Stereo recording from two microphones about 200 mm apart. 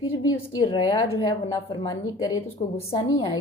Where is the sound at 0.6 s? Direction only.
20° left (ahead or behind).